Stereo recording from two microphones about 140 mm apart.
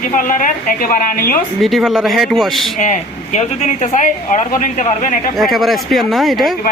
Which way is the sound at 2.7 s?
65° left (ahead or behind).